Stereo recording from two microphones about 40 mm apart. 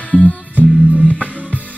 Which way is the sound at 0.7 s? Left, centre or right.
Right.